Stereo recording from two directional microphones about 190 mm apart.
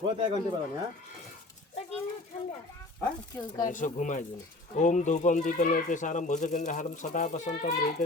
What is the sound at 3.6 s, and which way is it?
Speech, 40° left (ahead or behind).